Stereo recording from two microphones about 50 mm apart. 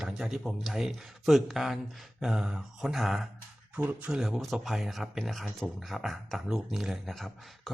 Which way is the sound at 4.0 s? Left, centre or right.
Centre.